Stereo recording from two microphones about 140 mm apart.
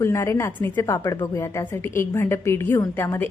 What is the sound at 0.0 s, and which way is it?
A woman's voice, 20° left (ahead or behind).